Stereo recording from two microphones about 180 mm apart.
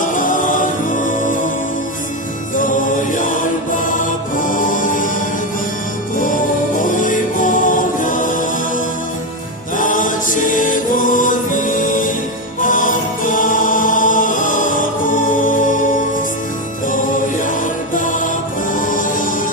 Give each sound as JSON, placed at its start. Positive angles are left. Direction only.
{"t": 0.1, "sound": "music", "side_deg": 45}
{"t": 2.6, "sound": "music", "side_deg": 45}
{"t": 6.1, "sound": "music", "side_deg": 45}